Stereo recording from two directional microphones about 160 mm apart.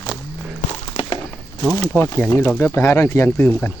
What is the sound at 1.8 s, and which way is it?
Speech, 15° left (ahead or behind).